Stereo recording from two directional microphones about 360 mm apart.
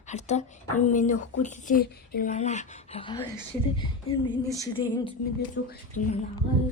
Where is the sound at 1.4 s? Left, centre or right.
Left.